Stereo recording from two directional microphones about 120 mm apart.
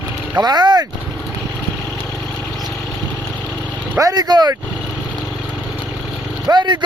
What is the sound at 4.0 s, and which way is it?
Speech, 30° right (ahead or behind).